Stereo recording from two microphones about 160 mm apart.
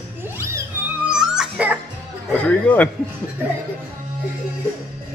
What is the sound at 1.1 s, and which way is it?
Music, 5° right (ahead or behind).